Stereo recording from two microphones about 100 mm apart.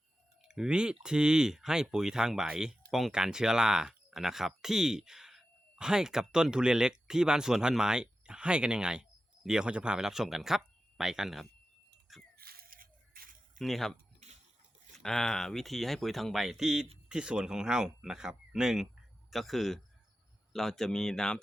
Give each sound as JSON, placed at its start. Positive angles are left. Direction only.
{"t": 0.4, "sound": "speech", "side_deg": -5}
{"t": 12.1, "sound": "a sound", "side_deg": 0}
{"t": 13.6, "sound": "speech", "side_deg": 0}
{"t": 14.9, "sound": "speech", "side_deg": 5}